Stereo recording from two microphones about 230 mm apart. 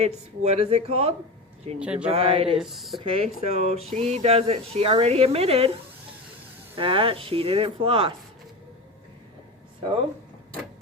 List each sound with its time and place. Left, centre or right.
0.0 s speech: right
1.8 s speech: centre
2.0 s speech: right
2.6 s speech: centre
3.0 s speech: right
6.7 s speech: right